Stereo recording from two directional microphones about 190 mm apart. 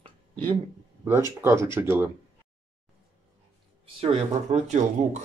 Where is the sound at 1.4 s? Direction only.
15° right (ahead or behind).